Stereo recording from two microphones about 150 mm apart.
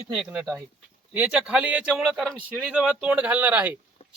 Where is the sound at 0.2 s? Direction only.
Centre (ahead or behind).